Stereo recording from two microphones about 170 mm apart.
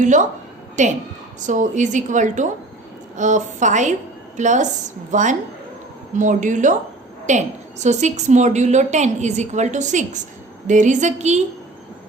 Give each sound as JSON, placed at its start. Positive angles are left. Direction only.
{"t": 0.0, "sound": "a woman's voice", "side_deg": -45}